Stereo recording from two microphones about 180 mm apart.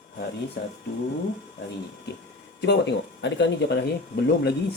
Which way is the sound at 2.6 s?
75° left (ahead or behind).